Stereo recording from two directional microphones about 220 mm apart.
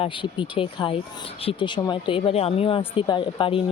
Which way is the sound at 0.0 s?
20° left (ahead or behind).